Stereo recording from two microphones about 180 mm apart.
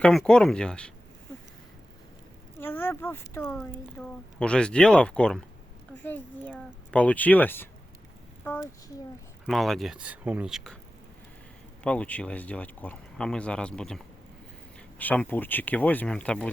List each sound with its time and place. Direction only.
0.0 s speech: 5° left (ahead or behind)
2.6 s speech: 10° left (ahead or behind)
9.5 s speech: centre (ahead or behind)
11.8 s speech: 5° left (ahead or behind)